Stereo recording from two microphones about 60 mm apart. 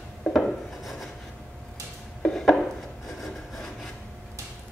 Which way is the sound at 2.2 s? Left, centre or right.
Centre.